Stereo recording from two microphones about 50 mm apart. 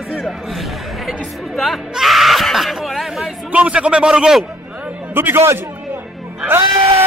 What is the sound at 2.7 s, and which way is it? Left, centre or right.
Chatter, centre.